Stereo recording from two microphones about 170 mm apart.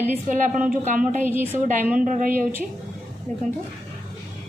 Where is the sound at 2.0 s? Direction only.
50° right (ahead or behind).